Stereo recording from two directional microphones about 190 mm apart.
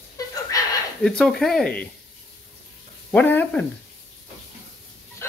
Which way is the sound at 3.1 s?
10° left (ahead or behind).